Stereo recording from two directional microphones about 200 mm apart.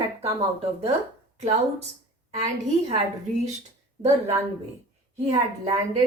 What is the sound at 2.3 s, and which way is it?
Speech, 35° right (ahead or behind).